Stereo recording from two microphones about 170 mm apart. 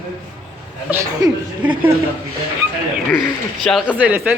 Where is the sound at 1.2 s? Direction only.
25° right (ahead or behind).